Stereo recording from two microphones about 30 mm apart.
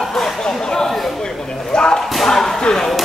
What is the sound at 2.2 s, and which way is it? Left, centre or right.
Chop, centre.